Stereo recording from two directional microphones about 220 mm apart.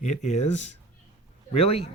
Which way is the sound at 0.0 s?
30° left (ahead or behind).